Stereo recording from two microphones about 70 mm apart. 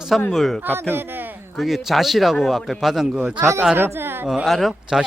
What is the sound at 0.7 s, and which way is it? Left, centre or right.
Speech, right.